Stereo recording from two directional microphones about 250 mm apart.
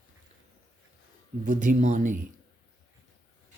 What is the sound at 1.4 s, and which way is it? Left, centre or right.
Speech, right.